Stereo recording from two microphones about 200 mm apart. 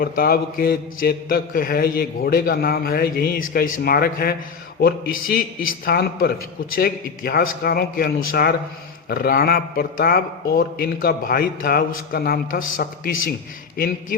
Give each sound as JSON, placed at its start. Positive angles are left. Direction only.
{"t": 0.0, "sound": "speech", "side_deg": 50}